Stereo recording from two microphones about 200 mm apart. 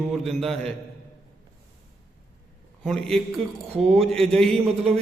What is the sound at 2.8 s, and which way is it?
Speech, centre (ahead or behind).